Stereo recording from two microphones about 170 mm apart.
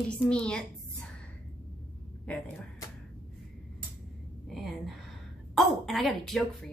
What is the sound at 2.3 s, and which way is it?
Speech, 5° left (ahead or behind).